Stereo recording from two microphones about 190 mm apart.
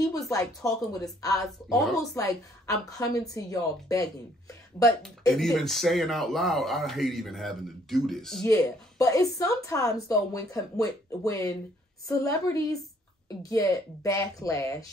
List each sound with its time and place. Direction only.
0.1 s speech: 20° left (ahead or behind)
1.7 s speech: centre (ahead or behind)
2.0 s speech: 15° left (ahead or behind)
5.0 s speech: centre (ahead or behind)
8.5 s speech: 15° left (ahead or behind)
13.4 s speech: 15° left (ahead or behind)